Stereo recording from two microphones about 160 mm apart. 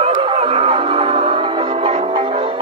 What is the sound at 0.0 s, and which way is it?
Music, 35° right (ahead or behind).